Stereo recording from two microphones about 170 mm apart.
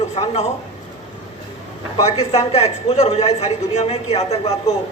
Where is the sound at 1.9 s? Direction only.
35° left (ahead or behind).